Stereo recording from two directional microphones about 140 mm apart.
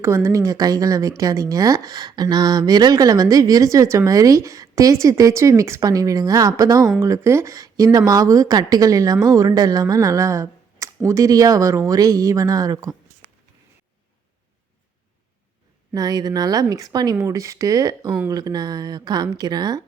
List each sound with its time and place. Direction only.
0.0 s speech: 20° right (ahead or behind)
15.9 s speech: 25° right (ahead or behind)